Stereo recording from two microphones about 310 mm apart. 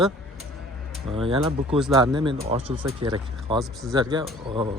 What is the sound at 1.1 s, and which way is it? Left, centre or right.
Speech, centre.